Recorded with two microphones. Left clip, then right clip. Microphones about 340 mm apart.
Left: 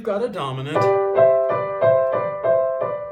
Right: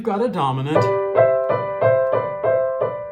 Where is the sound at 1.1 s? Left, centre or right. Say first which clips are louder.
Right 1 dB; right.